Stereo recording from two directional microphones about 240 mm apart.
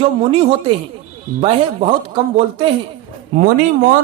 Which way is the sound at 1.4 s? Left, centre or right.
Right.